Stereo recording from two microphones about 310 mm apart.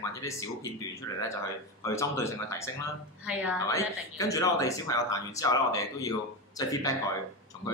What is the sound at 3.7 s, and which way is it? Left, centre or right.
Speech, centre.